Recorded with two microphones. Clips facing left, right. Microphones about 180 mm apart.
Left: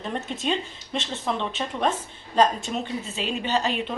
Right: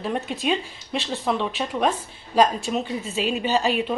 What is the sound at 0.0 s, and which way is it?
A woman's voice, 10° right (ahead or behind).